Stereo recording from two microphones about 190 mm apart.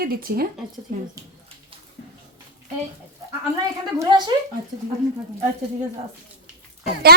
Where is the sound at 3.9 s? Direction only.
20° right (ahead or behind).